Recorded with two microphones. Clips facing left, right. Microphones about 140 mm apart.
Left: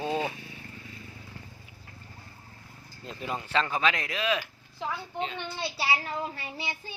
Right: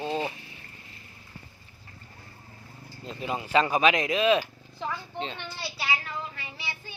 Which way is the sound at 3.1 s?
5° right (ahead or behind).